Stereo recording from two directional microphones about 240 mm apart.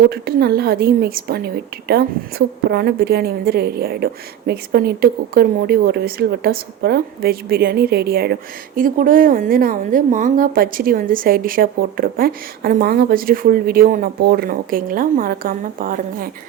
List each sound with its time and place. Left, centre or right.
0.1 s a woman's voice: right